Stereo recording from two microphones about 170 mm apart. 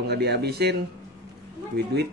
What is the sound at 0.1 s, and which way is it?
Speech, 75° right (ahead or behind).